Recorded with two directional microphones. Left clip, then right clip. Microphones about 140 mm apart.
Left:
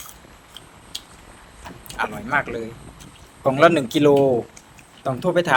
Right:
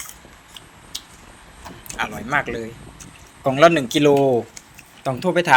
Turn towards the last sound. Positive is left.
turn(degrees=15)  # may be behind; listen again after turning